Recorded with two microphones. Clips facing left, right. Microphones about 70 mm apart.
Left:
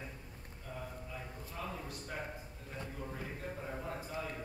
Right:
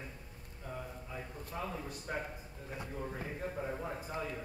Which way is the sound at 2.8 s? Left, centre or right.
Centre.